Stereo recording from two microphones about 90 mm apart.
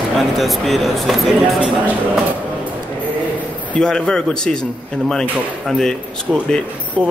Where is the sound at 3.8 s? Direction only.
10° left (ahead or behind).